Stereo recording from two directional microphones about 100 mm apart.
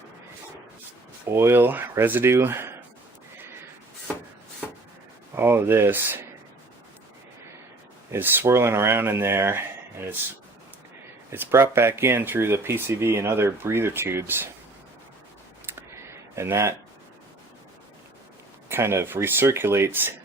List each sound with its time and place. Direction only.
1.3 s speech: 25° right (ahead or behind)
5.3 s speech: 25° right (ahead or behind)
8.1 s speech: 25° right (ahead or behind)
11.3 s speech: 25° right (ahead or behind)
15.6 s a sound: 25° right (ahead or behind)
18.7 s speech: 25° right (ahead or behind)